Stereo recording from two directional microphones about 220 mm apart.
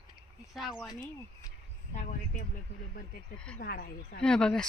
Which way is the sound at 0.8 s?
15° left (ahead or behind).